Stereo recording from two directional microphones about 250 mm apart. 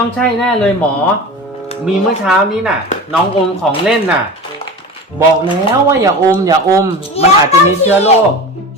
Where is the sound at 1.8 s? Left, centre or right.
Centre.